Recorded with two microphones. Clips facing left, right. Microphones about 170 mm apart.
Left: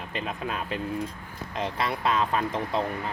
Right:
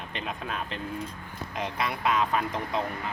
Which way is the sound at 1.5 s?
30° left (ahead or behind).